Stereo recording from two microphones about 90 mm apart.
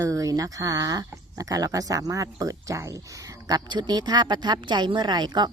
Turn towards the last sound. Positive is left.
turn(degrees=-50)  # may be behind; listen again after turning